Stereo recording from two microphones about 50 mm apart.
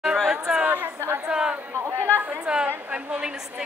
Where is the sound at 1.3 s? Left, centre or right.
Centre.